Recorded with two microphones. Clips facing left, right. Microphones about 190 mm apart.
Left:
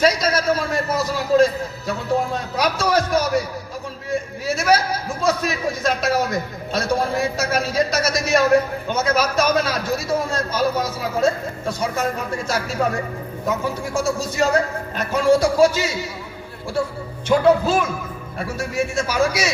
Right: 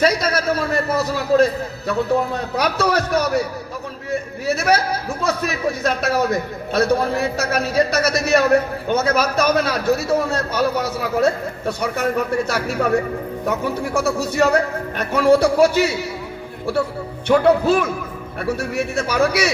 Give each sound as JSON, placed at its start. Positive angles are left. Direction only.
{"t": 0.0, "sound": "a man's voice", "side_deg": -60}
{"t": 4.4, "sound": "a man's voice", "side_deg": -60}
{"t": 17.2, "sound": "a man's voice", "side_deg": -60}